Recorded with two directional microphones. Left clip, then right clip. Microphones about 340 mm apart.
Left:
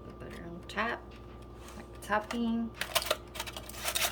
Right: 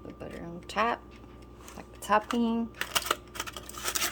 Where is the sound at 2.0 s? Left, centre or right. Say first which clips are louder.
Right 6 dB; centre.